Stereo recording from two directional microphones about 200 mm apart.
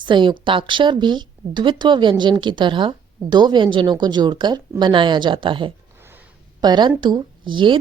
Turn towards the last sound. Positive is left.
turn(degrees=-25)  # may be behind; listen again after turning